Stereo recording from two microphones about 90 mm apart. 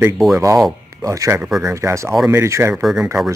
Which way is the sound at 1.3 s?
10° right (ahead or behind).